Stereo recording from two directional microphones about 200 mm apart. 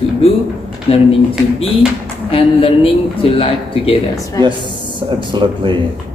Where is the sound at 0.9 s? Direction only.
30° left (ahead or behind).